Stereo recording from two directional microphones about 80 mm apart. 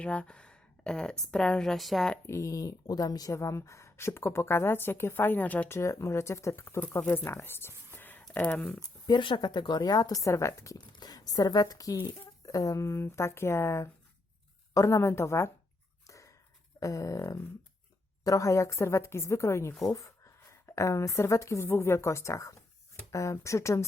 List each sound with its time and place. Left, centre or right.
0.0 s a woman's voice: centre
2.2 s speech: left
3.3 s a woman's voice: left
5.6 s a woman's voice: left
7.4 s whispering: left
8.3 s speech: centre
9.0 s speech: left
10.8 s speech: left
11.9 s speech: left
12.5 s a woman's voice: left
16.0 s a sound: left
16.8 s a woman's voice: left